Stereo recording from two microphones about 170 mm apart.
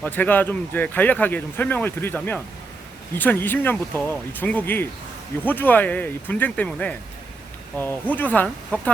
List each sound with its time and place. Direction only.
0.0 s speech: 10° left (ahead or behind)